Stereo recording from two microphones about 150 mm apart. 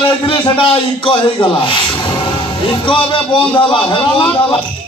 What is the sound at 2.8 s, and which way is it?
A man's voice, 35° left (ahead or behind).